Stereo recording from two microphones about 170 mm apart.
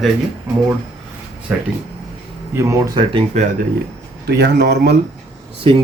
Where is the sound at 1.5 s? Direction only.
10° right (ahead or behind).